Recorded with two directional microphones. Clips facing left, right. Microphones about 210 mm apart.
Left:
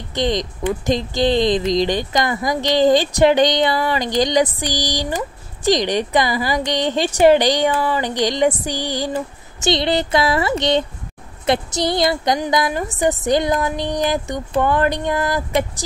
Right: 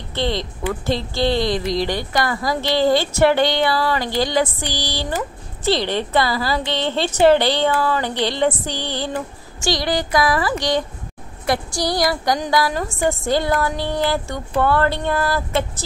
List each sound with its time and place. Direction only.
0.1 s speech: 15° left (ahead or behind)